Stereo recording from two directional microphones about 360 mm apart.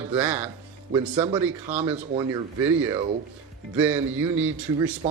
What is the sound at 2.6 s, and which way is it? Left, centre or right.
A man's voice, centre.